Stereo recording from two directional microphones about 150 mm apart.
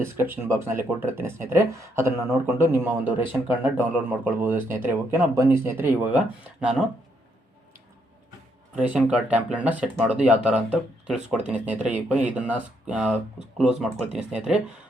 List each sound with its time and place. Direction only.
0.0 s speech: 15° right (ahead or behind)
8.7 s speech: 10° right (ahead or behind)